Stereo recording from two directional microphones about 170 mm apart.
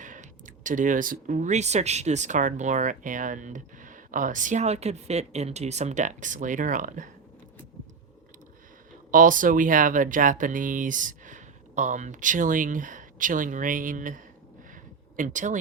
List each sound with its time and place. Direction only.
0.0 s speech: 50° right (ahead or behind)
9.1 s speech: 50° right (ahead or behind)